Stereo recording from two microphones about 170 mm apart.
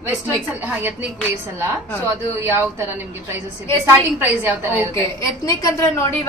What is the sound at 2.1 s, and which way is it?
Speech, 15° right (ahead or behind).